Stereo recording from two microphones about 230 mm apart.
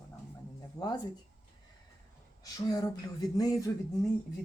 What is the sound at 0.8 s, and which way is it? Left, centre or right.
Speech, centre.